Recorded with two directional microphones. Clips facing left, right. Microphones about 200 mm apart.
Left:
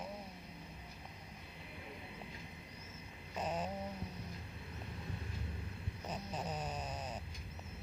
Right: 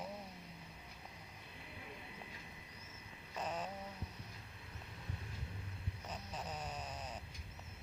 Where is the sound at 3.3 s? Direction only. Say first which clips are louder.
Left 3 dB; 20° left (ahead or behind).